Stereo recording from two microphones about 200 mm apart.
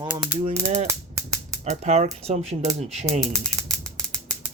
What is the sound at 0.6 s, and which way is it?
Speech, 35° right (ahead or behind).